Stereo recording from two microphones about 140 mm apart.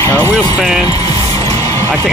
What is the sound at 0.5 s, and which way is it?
Speech, 5° right (ahead or behind).